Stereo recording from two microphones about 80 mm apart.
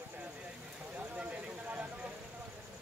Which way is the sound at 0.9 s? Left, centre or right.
Centre.